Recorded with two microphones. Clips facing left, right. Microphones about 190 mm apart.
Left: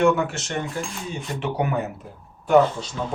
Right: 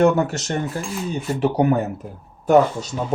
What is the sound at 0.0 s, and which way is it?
Speech, 40° right (ahead or behind).